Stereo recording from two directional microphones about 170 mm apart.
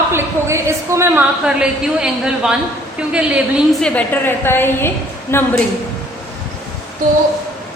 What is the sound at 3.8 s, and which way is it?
A woman's voice, 10° left (ahead or behind).